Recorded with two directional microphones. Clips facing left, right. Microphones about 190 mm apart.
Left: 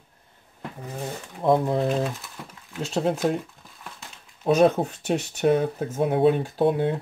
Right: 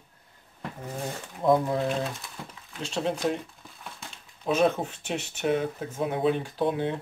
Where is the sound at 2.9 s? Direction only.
40° left (ahead or behind).